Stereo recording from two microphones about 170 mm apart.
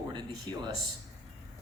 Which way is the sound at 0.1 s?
25° right (ahead or behind).